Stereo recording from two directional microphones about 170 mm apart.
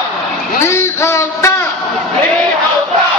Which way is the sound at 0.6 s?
15° left (ahead or behind).